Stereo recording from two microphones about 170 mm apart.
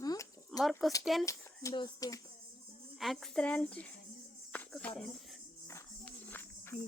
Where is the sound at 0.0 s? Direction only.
20° left (ahead or behind).